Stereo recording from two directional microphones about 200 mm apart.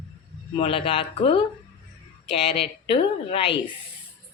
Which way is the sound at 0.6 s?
25° left (ahead or behind).